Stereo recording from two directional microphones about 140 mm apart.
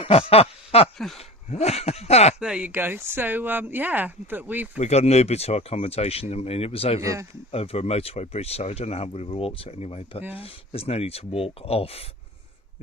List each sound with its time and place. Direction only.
0.0 s a sound: 40° left (ahead or behind)
0.9 s speech: centre (ahead or behind)
1.5 s speech: 50° left (ahead or behind)
2.4 s speech: 10° right (ahead or behind)
4.8 s speech: 50° left (ahead or behind)
7.0 s speech: 20° right (ahead or behind)
7.5 s speech: 45° left (ahead or behind)